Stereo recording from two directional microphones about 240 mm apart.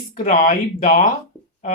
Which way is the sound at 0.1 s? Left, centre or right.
Left.